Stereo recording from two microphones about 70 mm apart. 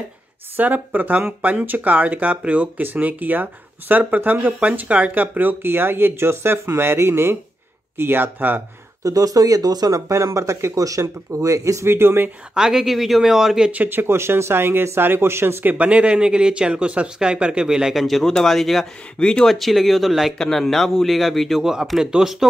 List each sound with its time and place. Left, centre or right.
0.6 s speech: right
9.0 s speech: right
12.5 s a man's voice: centre
13.7 s speech: right
15.6 s a man's voice: right; by 22.5 s centre